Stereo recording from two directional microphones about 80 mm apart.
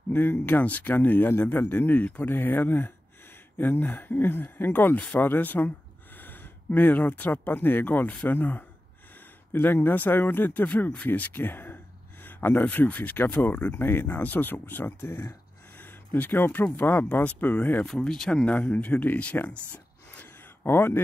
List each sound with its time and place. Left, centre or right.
0.1 s speech: left
15.8 s a sound: left
16.7 s speech: left
17.8 s speech: centre
20.6 s speech: left